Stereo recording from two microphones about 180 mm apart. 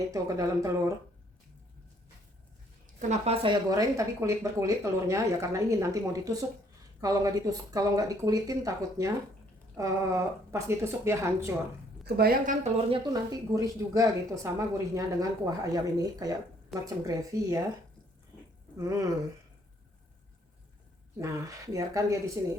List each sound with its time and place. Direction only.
0.1 s speech: 20° right (ahead or behind)
3.0 s speech: 40° right (ahead or behind); by 11.5 s 15° right (ahead or behind)
12.0 s a woman's voice: 60° right (ahead or behind)
12.9 s speech: 20° right (ahead or behind)
18.8 s speech: 20° right (ahead or behind)
21.2 s speech: 20° right (ahead or behind)